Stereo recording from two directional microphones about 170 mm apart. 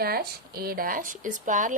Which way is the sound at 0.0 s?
65° right (ahead or behind).